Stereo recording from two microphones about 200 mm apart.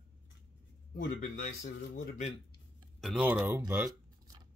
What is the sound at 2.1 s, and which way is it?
Speech, 35° left (ahead or behind).